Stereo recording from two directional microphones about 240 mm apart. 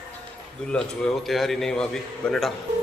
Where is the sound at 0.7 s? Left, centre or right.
Centre.